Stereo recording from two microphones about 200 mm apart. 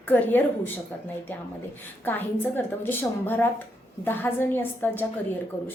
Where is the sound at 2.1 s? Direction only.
10° left (ahead or behind).